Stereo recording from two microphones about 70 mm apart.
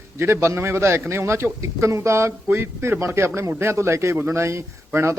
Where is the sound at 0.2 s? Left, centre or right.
Right.